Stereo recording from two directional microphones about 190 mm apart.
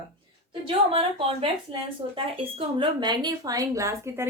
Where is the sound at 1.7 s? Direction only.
30° right (ahead or behind).